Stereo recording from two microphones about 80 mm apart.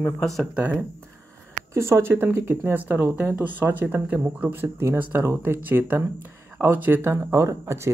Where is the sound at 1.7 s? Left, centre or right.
Right.